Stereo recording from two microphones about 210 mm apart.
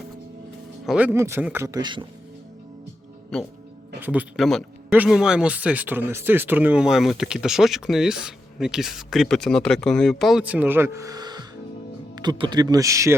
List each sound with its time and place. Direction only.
0.9 s a man's voice: 5° right (ahead or behind)
3.3 s speech: centre (ahead or behind); by 13.1 s 15° right (ahead or behind)